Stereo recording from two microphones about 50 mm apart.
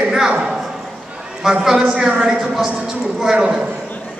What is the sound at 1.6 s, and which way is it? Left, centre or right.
A man's voice, centre.